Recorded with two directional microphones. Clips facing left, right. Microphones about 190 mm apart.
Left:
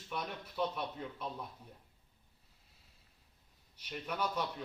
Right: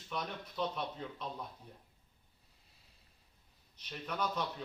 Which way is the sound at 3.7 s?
10° left (ahead or behind).